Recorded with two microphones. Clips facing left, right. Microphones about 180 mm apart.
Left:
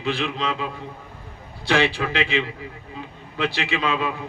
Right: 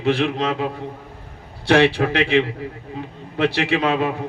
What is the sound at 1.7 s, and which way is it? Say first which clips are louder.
A man's voice: right 6 dB; 65° right (ahead or behind).